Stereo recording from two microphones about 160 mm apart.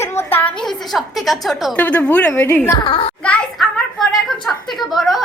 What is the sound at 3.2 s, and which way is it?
A woman's voice, 10° left (ahead or behind).